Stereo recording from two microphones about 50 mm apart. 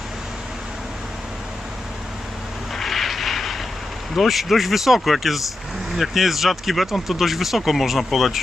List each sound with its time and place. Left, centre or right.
2.7 s vehicle: centre
4.1 s speech: centre